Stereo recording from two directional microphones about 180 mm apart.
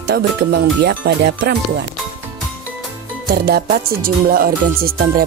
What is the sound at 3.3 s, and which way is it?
Music, 60° right (ahead or behind).